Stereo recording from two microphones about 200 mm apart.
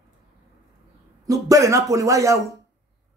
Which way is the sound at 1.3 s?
15° right (ahead or behind).